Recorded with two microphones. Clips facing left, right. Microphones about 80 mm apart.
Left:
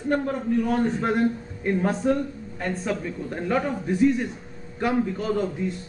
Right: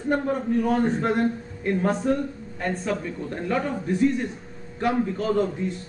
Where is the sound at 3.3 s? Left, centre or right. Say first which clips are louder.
Left 1 dB; centre.